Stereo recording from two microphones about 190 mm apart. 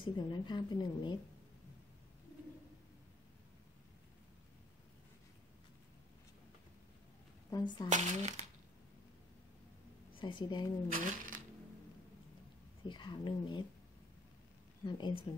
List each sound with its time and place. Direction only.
0.0 s a woman's voice: 25° left (ahead or behind)
7.5 s a woman's voice: 20° left (ahead or behind)
7.9 s speech: 40° right (ahead or behind)
10.1 s a woman's voice: 25° left (ahead or behind)
10.9 s speech: 45° right (ahead or behind)
12.8 s a woman's voice: 25° left (ahead or behind)
14.9 s a woman's voice: 25° left (ahead or behind)